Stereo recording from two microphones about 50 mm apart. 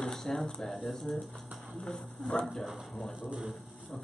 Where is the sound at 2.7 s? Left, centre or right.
Centre.